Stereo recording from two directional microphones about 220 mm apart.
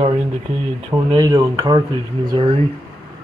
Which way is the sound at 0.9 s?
20° right (ahead or behind).